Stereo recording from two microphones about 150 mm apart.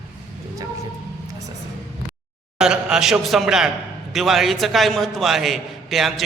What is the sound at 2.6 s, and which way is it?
A man's voice, 5° right (ahead or behind).